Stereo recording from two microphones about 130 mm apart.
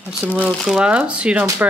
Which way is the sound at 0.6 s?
5° right (ahead or behind).